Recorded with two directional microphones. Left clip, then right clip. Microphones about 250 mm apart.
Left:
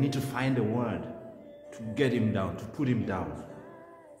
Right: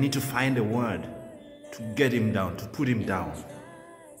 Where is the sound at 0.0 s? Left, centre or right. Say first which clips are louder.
Right 4 dB; right.